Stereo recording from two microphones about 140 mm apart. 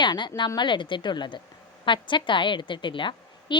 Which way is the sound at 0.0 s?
30° left (ahead or behind).